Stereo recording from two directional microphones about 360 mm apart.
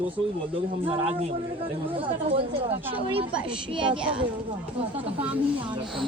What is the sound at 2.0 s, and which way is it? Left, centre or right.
Speech, centre.